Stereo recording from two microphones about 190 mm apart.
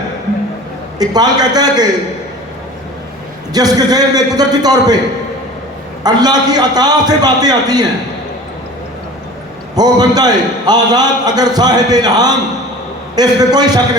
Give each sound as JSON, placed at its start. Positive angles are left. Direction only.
{"t": 0.9, "sound": "a man's voice", "side_deg": -20}
{"t": 3.5, "sound": "a man's voice", "side_deg": -20}
{"t": 6.0, "sound": "a man's voice", "side_deg": -20}
{"t": 9.7, "sound": "a man's voice", "side_deg": -20}